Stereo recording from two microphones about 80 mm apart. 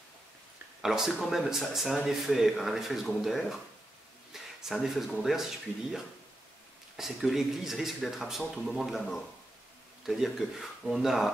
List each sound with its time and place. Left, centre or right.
0.8 s speech: centre
7.0 s speech: centre